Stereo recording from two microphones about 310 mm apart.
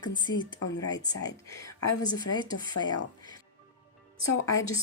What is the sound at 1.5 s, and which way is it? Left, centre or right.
Speech, centre.